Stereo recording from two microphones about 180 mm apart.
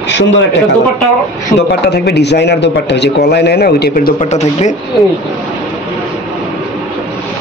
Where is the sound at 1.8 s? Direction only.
65° left (ahead or behind).